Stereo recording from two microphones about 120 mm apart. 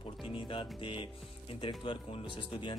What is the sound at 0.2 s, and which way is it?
Music, 45° left (ahead or behind).